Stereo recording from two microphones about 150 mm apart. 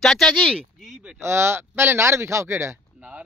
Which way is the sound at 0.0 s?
Centre (ahead or behind).